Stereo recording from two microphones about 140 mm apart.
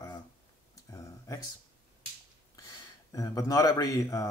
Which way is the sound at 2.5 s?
25° left (ahead or behind).